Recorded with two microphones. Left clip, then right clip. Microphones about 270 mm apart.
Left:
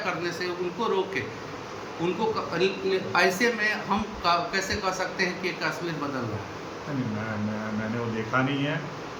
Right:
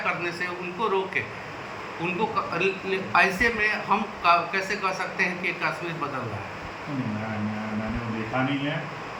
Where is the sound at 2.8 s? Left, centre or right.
Centre.